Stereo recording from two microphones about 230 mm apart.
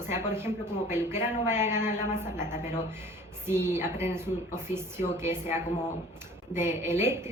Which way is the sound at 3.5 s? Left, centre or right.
Centre.